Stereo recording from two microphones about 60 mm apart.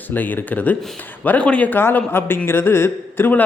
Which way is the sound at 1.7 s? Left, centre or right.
Left.